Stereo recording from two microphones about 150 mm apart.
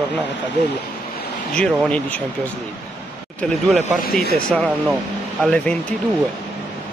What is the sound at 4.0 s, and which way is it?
Speech, 80° left.